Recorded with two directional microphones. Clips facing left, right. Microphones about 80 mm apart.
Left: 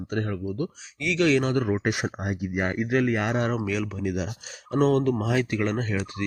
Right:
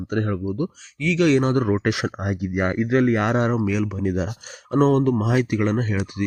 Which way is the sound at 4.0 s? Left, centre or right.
Right.